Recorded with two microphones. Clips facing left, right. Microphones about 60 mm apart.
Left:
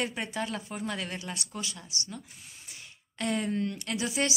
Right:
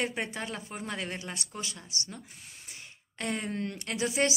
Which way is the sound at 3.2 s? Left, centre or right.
Right.